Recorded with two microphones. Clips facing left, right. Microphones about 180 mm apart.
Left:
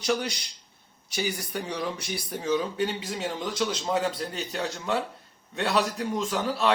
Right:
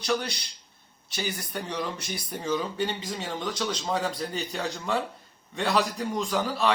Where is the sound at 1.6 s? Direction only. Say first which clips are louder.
Even; 10° left (ahead or behind).